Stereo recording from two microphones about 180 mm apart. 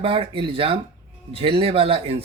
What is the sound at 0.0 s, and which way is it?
Speech, 30° right (ahead or behind).